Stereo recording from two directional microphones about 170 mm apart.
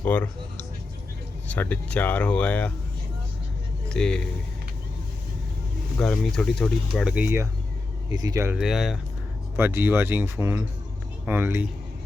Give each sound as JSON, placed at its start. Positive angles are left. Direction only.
{"t": 0.0, "sound": "speech", "side_deg": 10}
{"t": 3.8, "sound": "speech", "side_deg": 5}
{"t": 6.0, "sound": "speech", "side_deg": 5}
{"t": 8.5, "sound": "speech", "side_deg": 0}
{"t": 9.6, "sound": "speech", "side_deg": -15}